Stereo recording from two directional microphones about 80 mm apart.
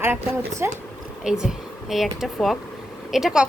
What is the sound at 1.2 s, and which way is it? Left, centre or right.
Speech, centre.